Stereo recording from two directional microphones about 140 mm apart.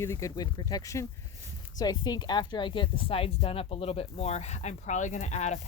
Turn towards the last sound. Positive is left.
turn(degrees=55)  # may be behind; listen again after turning